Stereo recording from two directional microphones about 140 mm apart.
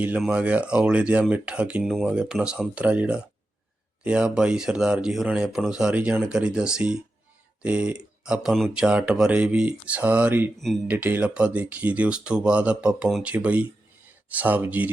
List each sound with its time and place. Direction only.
0.2 s speech: 10° right (ahead or behind)